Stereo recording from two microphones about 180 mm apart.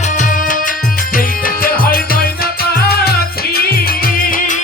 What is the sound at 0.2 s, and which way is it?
Music, 50° left (ahead or behind).